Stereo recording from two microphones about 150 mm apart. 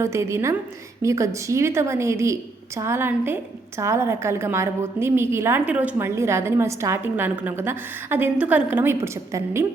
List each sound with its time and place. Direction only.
0.0 s a woman's voice: 20° right (ahead or behind)